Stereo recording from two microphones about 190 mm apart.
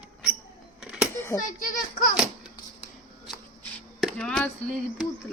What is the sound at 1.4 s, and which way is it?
Speech, 45° left (ahead or behind).